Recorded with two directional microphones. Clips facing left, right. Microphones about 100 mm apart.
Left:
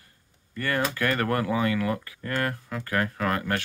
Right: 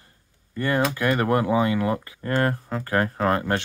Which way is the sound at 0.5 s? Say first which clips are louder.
Right 4 dB; 20° right (ahead or behind).